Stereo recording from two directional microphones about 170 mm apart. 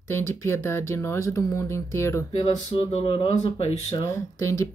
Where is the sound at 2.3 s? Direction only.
40° left (ahead or behind).